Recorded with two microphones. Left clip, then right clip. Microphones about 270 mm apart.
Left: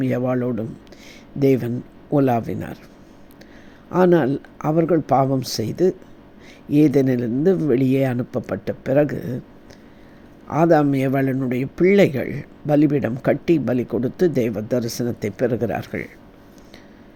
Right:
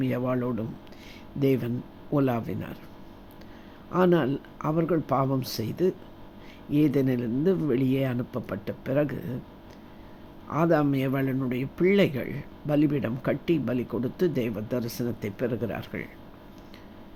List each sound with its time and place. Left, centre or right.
0.0 s speech: centre
3.9 s speech: centre
10.5 s speech: centre